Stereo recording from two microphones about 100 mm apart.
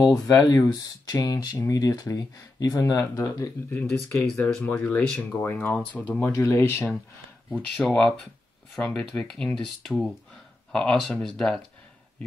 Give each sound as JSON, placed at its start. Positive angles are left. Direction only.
{"t": 0.0, "sound": "speech", "side_deg": 35}
{"t": 3.7, "sound": "speech", "side_deg": 20}
{"t": 6.2, "sound": "speech", "side_deg": 30}
{"t": 7.8, "sound": "speech", "side_deg": 10}